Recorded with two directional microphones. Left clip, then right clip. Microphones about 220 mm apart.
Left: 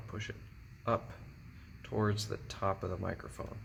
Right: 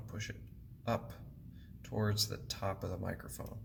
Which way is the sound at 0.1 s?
30° left (ahead or behind).